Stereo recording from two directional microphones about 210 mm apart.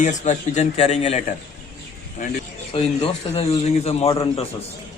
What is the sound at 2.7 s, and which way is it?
A man's voice, 25° left (ahead or behind).